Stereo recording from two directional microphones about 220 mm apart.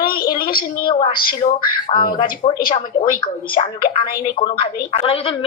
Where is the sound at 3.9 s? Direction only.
20° left (ahead or behind).